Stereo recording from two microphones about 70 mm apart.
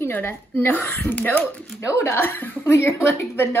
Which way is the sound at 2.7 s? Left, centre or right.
Left.